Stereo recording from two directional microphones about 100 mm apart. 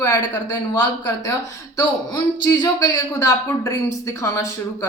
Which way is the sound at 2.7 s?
30° left (ahead or behind).